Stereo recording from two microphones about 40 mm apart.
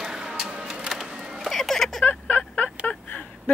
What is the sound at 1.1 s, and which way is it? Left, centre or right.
Music, centre.